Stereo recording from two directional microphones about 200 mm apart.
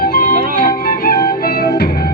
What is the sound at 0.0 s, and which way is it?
Music, 45° left (ahead or behind).